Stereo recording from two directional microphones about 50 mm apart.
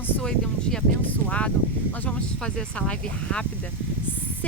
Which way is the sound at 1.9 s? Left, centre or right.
Left.